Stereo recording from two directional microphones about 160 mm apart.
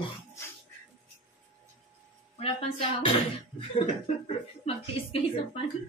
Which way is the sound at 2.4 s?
35° left (ahead or behind).